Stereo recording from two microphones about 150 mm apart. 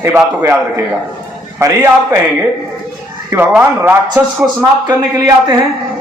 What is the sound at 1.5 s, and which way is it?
Speech, 20° right (ahead or behind).